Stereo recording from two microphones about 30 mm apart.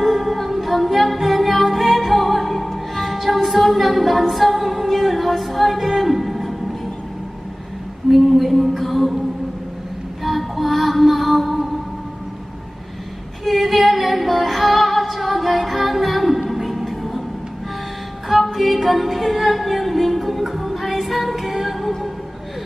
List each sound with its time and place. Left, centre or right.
0.0 s music: centre
8.1 s a sound: centre
10.2 s music: centre
13.5 s music: centre
18.4 s music: centre